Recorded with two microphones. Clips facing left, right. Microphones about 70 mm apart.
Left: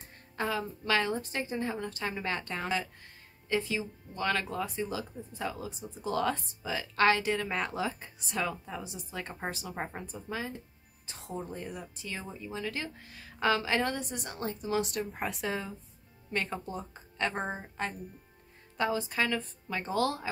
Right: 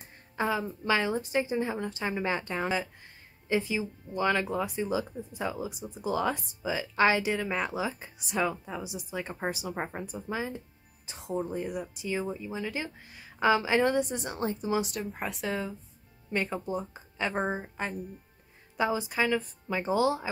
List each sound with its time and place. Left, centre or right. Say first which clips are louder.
0.4 s speech: right 3 dB; centre
13.8 s a woman's voice: right 7 dB; right
14.8 s a woman's voice: even; centre